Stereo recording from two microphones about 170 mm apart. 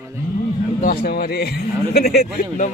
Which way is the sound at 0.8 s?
60° left (ahead or behind).